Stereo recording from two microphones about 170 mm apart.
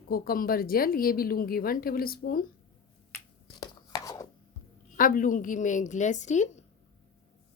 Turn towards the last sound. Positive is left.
turn(degrees=45)  # may be behind; listen again after turning